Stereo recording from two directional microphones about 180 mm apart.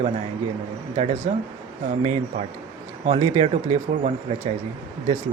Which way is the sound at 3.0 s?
35° right (ahead or behind).